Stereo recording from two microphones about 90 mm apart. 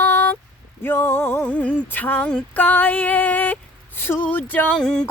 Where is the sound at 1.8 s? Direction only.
20° left (ahead or behind).